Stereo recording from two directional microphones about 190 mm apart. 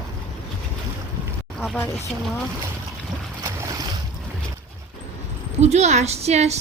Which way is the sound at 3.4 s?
15° right (ahead or behind).